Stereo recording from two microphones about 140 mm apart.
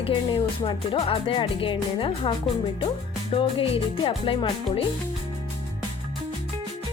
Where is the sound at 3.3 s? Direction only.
40° left (ahead or behind).